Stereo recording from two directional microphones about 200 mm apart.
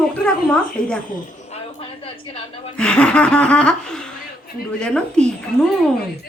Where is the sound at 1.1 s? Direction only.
30° left (ahead or behind).